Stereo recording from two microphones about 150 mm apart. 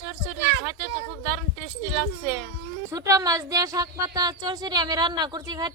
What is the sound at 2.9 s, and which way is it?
A woman's voice, 20° right (ahead or behind).